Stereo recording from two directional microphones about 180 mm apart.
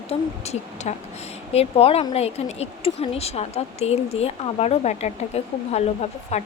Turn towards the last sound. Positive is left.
turn(degrees=35)  # may be behind; listen again after turning